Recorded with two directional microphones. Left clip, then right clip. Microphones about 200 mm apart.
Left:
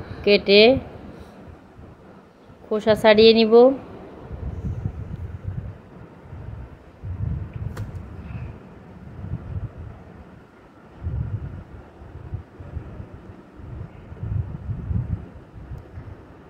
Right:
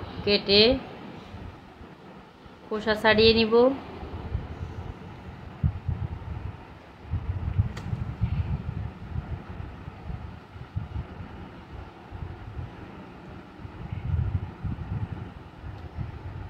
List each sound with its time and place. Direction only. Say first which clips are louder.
0.2 s a woman's voice: left 6 dB; 25° left (ahead or behind)
2.7 s a woman's voice: left 7 dB; 30° left (ahead or behind)